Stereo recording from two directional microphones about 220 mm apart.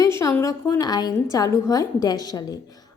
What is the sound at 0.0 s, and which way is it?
A woman's voice, 15° left (ahead or behind).